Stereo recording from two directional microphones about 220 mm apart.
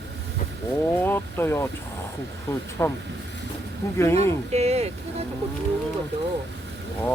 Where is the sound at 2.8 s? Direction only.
10° left (ahead or behind).